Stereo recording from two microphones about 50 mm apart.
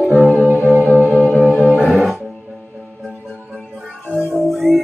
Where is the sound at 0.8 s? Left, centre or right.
Left.